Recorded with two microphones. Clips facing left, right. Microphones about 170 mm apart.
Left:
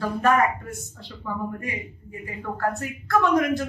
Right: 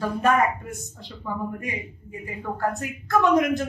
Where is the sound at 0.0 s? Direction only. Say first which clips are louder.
Even; 15° right (ahead or behind).